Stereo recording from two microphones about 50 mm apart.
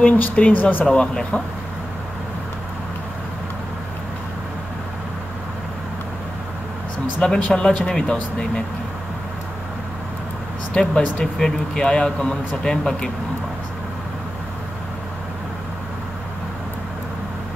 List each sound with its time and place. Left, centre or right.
0.0 s speech: left
0.9 s speech: left
7.2 s speech: left
10.7 s speech: centre